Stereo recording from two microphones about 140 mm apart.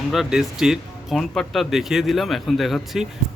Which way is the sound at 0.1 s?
5° right (ahead or behind).